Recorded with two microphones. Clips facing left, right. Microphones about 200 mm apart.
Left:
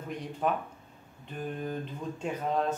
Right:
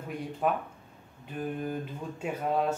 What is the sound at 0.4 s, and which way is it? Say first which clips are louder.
Speech: right 1 dB; 5° right (ahead or behind).